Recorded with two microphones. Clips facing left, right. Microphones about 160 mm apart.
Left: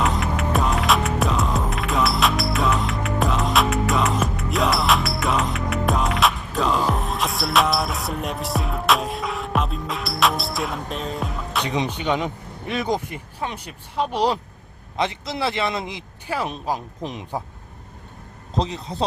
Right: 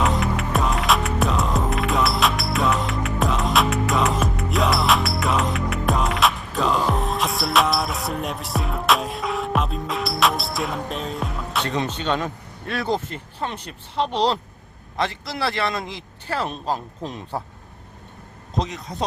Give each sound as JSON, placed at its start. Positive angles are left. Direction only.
{"t": 0.0, "sound": "music", "side_deg": 0}
{"t": 11.6, "sound": "a man's voice", "side_deg": 15}
{"t": 18.5, "sound": "speech", "side_deg": 30}